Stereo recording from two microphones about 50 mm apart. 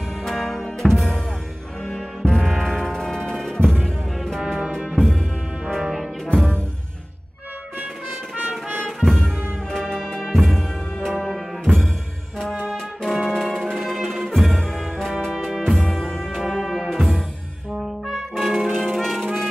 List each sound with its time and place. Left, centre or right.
0.2 s music: centre
4.4 s music: centre
4.9 s music: centre
8.4 s music: right
9.0 s music: centre
13.1 s music: centre
17.7 s brass instrument: centre
18.9 s music: centre